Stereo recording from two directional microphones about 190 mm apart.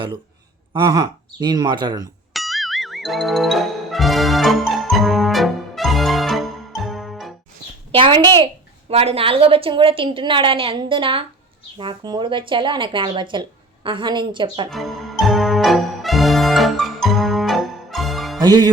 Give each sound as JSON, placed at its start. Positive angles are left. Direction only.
{"t": 0.7, "sound": "speech", "side_deg": -25}
{"t": 2.3, "sound": "music", "side_deg": 0}
{"t": 7.9, "sound": "speech", "side_deg": -25}
{"t": 14.7, "sound": "brass instrument", "side_deg": 0}
{"t": 18.3, "sound": "music", "side_deg": -20}